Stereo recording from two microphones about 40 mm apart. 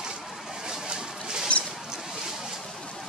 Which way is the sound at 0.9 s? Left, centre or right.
Centre.